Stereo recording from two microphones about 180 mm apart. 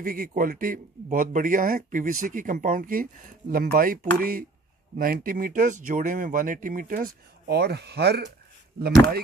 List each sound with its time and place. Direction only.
0.0 s speech: 50° right (ahead or behind)